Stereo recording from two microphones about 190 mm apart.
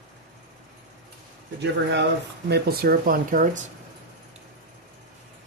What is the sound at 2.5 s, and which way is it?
Speech, 55° right (ahead or behind).